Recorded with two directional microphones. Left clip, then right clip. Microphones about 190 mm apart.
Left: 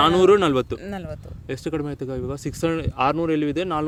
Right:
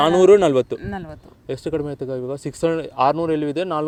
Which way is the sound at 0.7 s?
60° left (ahead or behind).